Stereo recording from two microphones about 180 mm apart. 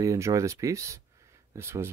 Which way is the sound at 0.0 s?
15° right (ahead or behind).